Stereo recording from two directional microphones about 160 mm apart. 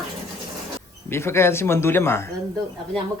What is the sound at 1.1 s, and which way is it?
Speech, 15° left (ahead or behind).